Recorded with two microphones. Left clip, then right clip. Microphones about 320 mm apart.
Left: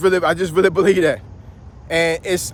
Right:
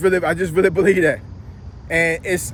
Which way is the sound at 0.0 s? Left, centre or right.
Centre.